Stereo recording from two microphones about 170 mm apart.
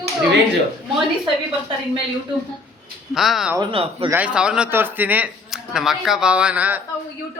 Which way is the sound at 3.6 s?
30° right (ahead or behind).